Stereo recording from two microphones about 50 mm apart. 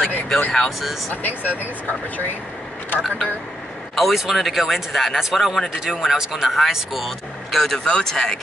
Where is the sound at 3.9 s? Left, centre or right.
Centre.